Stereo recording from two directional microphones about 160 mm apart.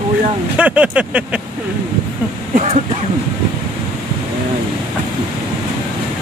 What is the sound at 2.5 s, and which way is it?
Speech, 40° right (ahead or behind).